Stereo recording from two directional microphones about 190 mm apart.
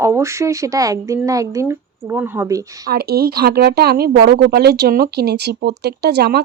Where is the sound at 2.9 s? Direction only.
55° right (ahead or behind).